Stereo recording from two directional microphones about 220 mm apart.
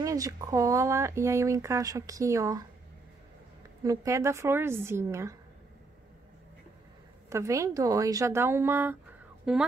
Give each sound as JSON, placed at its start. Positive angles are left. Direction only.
{"t": 0.0, "sound": "speech", "side_deg": -15}
{"t": 3.8, "sound": "speech", "side_deg": -15}
{"t": 7.2, "sound": "speech", "side_deg": -15}